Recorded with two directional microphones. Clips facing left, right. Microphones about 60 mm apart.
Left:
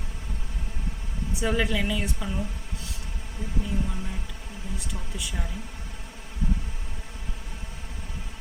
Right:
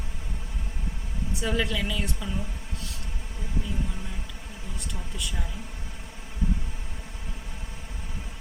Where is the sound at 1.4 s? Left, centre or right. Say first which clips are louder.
Left 2 dB; centre.